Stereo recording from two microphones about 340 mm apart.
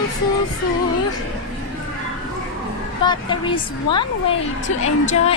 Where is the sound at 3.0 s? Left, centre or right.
Centre.